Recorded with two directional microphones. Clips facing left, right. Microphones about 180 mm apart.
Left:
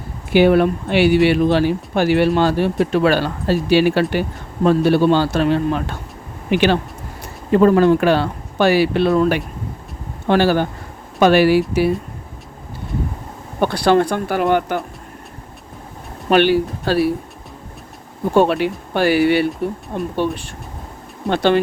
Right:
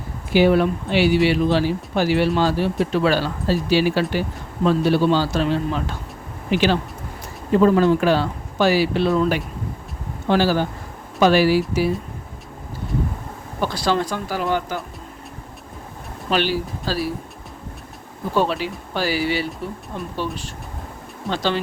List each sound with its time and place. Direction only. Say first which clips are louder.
0.3 s speech: left 3 dB; 60° left (ahead or behind)
13.6 s speech: left 7 dB; 60° left (ahead or behind)
16.3 s speech: left 7 dB; 60° left (ahead or behind)
18.3 s speech: left 6 dB; 60° left (ahead or behind)
21.2 s speech: left 7 dB; 60° left (ahead or behind)